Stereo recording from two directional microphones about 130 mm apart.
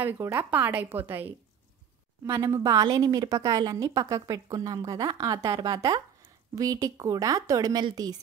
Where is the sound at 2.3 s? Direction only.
25° right (ahead or behind).